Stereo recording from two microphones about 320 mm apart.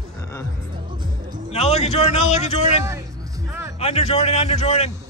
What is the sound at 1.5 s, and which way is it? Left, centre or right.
A man's voice, centre.